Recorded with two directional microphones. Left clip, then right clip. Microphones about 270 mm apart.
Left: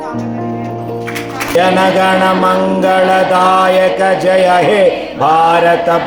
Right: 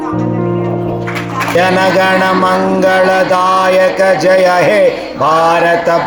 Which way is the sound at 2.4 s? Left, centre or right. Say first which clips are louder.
Right 1 dB; centre.